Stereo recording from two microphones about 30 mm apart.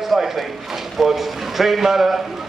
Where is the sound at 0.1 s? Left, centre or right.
Centre.